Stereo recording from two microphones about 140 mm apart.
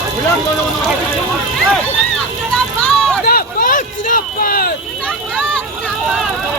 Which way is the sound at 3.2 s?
90° left.